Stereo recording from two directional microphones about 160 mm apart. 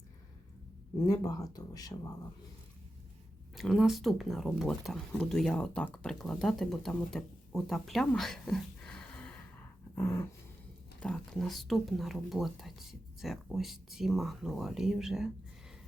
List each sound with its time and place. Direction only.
1.1 s speech: 20° left (ahead or behind)
3.5 s speech: centre (ahead or behind)
9.9 s dog: 15° left (ahead or behind)
11.0 s speech: 5° left (ahead or behind)